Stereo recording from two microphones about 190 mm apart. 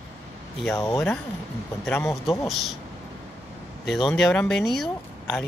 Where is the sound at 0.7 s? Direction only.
15° left (ahead or behind).